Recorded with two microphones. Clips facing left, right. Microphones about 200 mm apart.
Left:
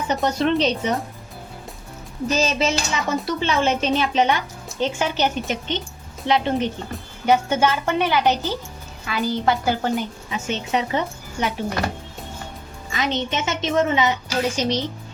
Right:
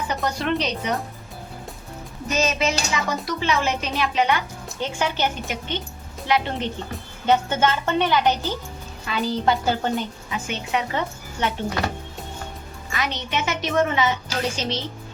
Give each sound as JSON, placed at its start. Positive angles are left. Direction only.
{"t": 0.3, "sound": "a woman's voice", "side_deg": 25}
{"t": 2.2, "sound": "a woman's voice", "side_deg": 35}
{"t": 9.0, "sound": "a woman's voice", "side_deg": 0}
{"t": 10.3, "sound": "a woman's voice", "side_deg": 25}
{"t": 12.9, "sound": "a woman's voice", "side_deg": 20}